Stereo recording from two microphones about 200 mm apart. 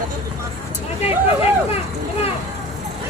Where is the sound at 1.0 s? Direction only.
30° left (ahead or behind).